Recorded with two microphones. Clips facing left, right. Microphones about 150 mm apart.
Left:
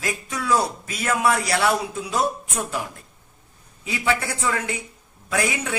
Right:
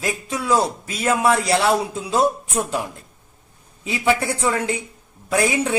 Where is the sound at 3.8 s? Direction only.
25° right (ahead or behind).